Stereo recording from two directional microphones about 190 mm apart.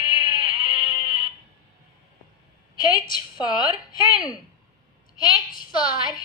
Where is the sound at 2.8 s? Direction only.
25° left (ahead or behind).